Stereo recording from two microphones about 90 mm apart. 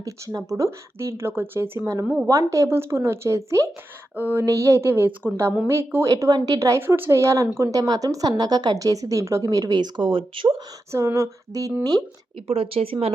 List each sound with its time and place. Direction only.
0.0 s speech: 40° right (ahead or behind)
4.1 s speech: 20° right (ahead or behind)
4.4 s speech: 35° right (ahead or behind)
6.6 s a woman's voice: 30° right (ahead or behind); by 10.5 s 70° right (ahead or behind)
10.9 s a woman's voice: 30° right (ahead or behind)
12.5 s speech: 90° right